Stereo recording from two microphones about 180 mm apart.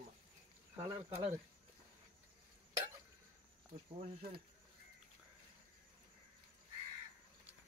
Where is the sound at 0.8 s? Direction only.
15° right (ahead or behind).